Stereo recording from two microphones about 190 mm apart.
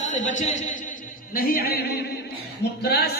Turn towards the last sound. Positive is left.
turn(degrees=55)  # may be behind; listen again after turning